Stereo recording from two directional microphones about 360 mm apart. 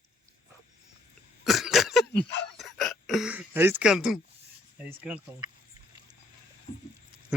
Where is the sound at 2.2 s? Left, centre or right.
Left.